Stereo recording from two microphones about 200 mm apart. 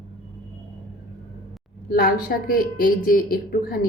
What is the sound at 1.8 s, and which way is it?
A woman's voice, 45° left (ahead or behind).